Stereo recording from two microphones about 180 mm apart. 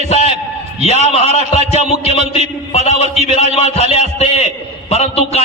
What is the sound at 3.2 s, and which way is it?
A man's voice, 35° left (ahead or behind).